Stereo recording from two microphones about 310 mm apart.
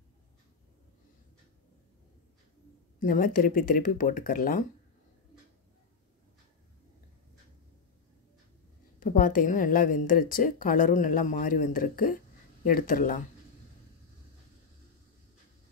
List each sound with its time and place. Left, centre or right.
3.0 s a woman's voice: left
9.0 s a woman's voice: left